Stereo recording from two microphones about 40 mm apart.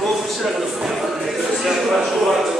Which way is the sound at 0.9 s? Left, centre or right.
Centre.